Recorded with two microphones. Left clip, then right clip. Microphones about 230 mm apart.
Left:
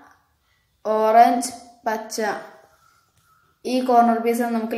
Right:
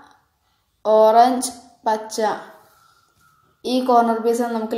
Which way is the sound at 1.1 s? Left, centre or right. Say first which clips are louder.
Right 1 dB; centre.